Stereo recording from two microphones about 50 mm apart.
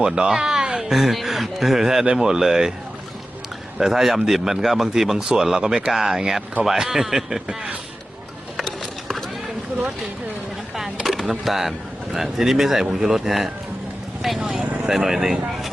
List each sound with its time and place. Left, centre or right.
0.0 s a man's voice: centre
3.8 s a man's voice: centre
8.6 s run: centre
11.0 s speech: centre
14.5 s speech: right
14.8 s a man's voice: centre